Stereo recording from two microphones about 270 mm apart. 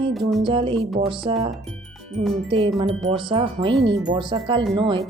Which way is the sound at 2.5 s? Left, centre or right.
Centre.